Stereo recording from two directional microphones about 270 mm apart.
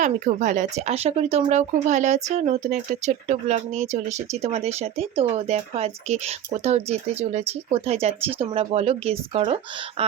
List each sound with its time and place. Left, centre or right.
0.0 s speech: right